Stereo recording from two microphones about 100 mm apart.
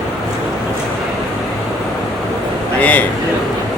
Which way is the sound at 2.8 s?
15° left (ahead or behind).